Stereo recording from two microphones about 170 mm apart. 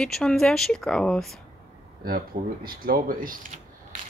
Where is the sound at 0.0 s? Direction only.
5° left (ahead or behind).